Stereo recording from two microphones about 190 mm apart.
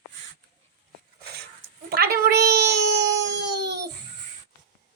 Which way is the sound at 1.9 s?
55° right (ahead or behind).